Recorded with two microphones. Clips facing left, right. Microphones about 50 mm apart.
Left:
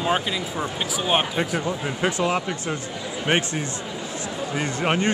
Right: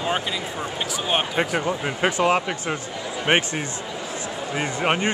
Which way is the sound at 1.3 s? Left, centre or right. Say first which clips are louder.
Right 2 dB; right.